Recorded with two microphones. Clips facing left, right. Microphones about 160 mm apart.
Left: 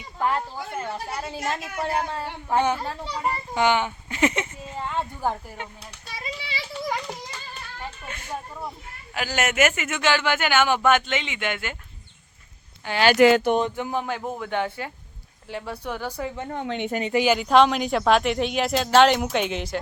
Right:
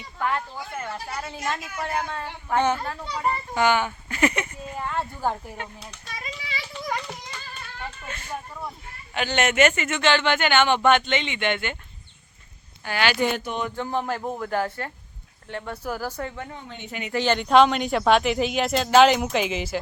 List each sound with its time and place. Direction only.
0.2 s a woman's voice: 30° left (ahead or behind)
1.5 s speech: 30° left (ahead or behind)
2.6 s a child's voice: 10° left (ahead or behind)
3.5 s a sound: 20° left (ahead or behind)
6.5 s children playing: 30° left (ahead or behind)
9.1 s speech: 5° left (ahead or behind)
13.1 s speech: 90° left
13.7 s a child's voice: 10° left (ahead or behind)
14.0 s speech: centre (ahead or behind)
16.6 s a woman's voice: 75° left (ahead or behind)
17.1 s speech: 10° left (ahead or behind)